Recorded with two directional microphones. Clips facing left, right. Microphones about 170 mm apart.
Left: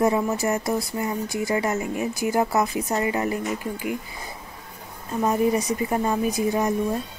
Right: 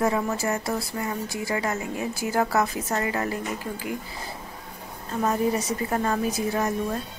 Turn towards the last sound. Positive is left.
turn(degrees=15)  # may be behind; listen again after turning